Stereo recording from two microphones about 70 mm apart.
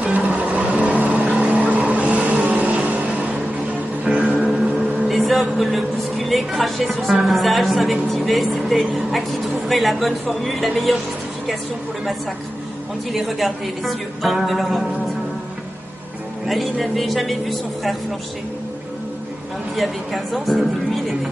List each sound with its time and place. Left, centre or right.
0.0 s vehicle: centre
4.0 s music: centre
5.0 s speech: centre
13.1 s a woman's voice: centre
16.4 s a woman's voice: centre
19.7 s a woman's voice: centre